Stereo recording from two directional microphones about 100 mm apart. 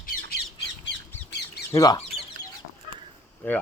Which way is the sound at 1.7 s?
35° left (ahead or behind).